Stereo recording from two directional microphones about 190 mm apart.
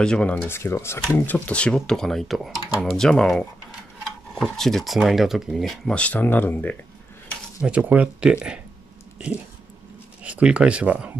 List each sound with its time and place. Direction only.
0.0 s speech: 5° left (ahead or behind)
7.6 s speech: 5° right (ahead or behind)
10.2 s speech: 5° right (ahead or behind)